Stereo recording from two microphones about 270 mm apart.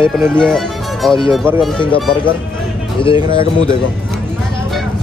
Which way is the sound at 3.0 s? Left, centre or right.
Centre.